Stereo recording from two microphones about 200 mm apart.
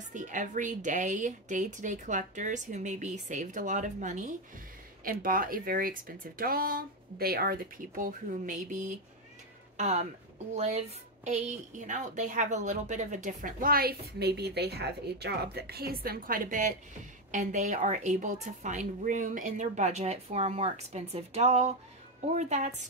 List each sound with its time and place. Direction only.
0.1 s a woman's voice: 40° right (ahead or behind)